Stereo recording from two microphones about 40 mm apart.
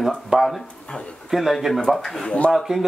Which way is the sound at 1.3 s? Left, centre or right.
Centre.